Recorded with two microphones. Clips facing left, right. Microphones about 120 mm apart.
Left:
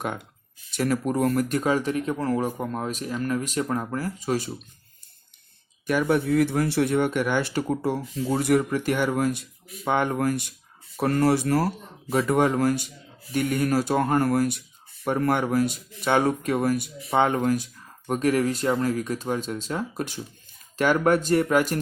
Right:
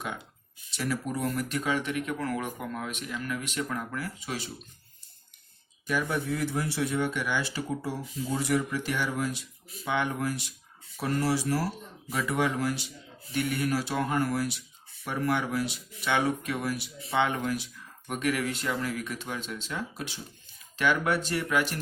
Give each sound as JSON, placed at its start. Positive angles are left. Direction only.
{"t": 0.7, "sound": "speech", "side_deg": 50}
{"t": 5.9, "sound": "speech", "side_deg": 60}
{"t": 12.0, "sound": "speech", "side_deg": 40}